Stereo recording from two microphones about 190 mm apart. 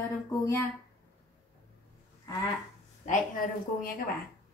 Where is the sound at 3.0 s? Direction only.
45° left (ahead or behind).